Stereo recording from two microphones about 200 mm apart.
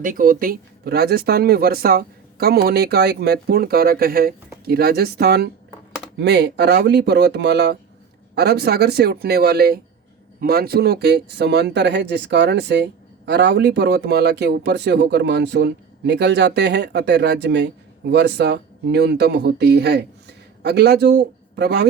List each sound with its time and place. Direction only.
0.0 s speech: 45° right (ahead or behind)